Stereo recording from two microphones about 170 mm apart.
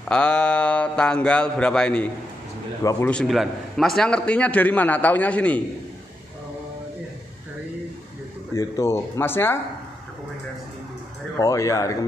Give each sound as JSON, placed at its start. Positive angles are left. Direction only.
{"t": 0.1, "sound": "speech", "side_deg": 5}
{"t": 2.8, "sound": "speech", "side_deg": 20}
{"t": 3.1, "sound": "a man's voice", "side_deg": 0}
{"t": 8.5, "sound": "a man's voice", "side_deg": 20}
{"t": 11.3, "sound": "speech", "side_deg": 20}